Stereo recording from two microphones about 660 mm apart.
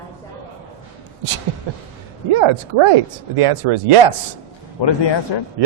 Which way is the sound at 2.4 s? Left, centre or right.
Right.